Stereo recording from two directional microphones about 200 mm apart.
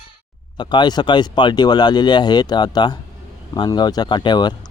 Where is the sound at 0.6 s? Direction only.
20° left (ahead or behind).